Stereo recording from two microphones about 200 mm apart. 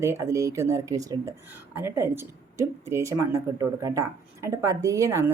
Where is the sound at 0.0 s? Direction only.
15° right (ahead or behind).